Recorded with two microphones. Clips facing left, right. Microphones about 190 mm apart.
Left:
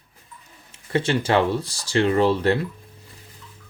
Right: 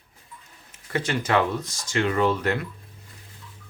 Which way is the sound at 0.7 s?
30° left (ahead or behind).